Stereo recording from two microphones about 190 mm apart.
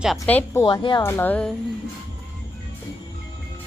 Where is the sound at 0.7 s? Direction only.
25° left (ahead or behind).